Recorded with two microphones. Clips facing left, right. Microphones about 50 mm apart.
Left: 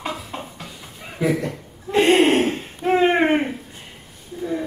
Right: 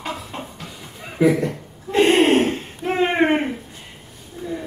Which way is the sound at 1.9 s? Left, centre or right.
Centre.